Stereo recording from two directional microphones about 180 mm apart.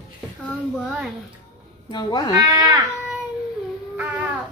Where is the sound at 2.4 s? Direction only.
20° right (ahead or behind).